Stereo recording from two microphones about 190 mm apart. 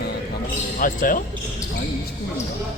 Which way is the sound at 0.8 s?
45° left (ahead or behind).